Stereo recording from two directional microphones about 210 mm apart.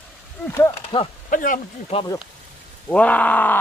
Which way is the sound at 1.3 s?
40° left (ahead or behind).